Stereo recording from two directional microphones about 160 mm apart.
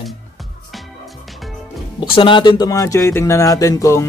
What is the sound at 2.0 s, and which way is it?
Speech, 30° left (ahead or behind).